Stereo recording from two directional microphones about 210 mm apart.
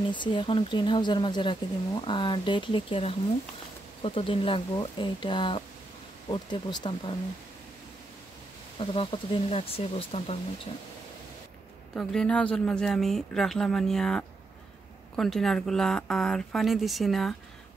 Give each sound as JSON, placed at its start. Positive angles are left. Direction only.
{"t": 0.1, "sound": "speech", "side_deg": 20}
{"t": 8.7, "sound": "speech", "side_deg": 25}
{"t": 11.9, "sound": "speech", "side_deg": 5}